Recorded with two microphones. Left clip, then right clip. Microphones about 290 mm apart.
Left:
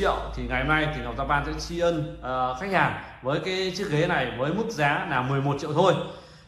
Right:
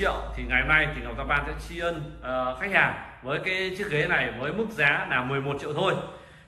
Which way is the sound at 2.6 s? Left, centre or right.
Centre.